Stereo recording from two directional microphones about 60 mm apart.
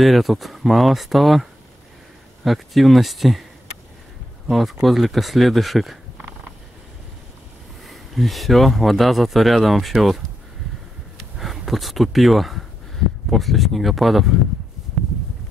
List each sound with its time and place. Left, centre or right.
0.0 s speech: centre
4.5 s speech: centre
7.8 s speech: centre